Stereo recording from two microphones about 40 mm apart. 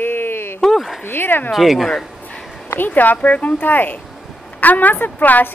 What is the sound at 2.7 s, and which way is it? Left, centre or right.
A woman's voice, left.